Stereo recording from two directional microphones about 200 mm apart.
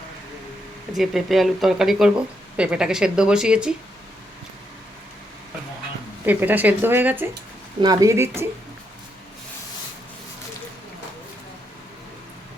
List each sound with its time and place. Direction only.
0.9 s speech: centre (ahead or behind)
6.2 s speech: 10° right (ahead or behind)
7.8 s speech: 20° right (ahead or behind)